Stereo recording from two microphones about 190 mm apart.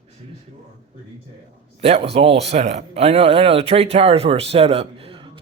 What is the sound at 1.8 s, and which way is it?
Speech, 30° right (ahead or behind).